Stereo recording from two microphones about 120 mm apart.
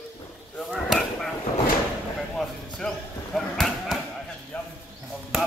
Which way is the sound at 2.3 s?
5° left (ahead or behind).